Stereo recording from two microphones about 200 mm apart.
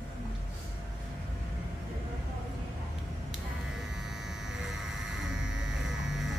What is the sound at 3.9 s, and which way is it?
Electric shaver, centre (ahead or behind).